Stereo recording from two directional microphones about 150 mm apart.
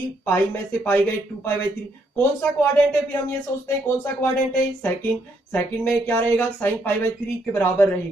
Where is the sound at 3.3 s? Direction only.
15° left (ahead or behind).